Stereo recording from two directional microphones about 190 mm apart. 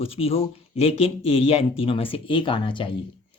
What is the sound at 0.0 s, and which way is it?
Speech, 30° left (ahead or behind).